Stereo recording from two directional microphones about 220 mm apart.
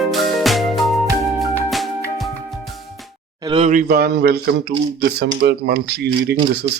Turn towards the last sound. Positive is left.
turn(degrees=-45)  # may be behind; listen again after turning